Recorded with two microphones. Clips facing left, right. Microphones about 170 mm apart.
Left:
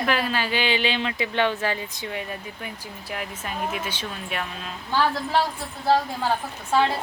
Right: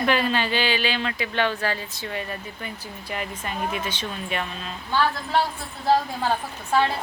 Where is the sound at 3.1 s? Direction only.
Centre (ahead or behind).